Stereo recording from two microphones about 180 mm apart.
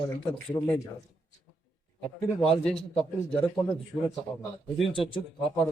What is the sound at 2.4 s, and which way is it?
Speech, 5° left (ahead or behind).